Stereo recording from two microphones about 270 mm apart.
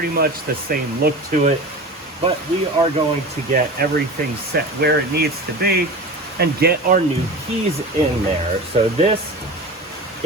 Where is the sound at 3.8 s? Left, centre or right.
Right.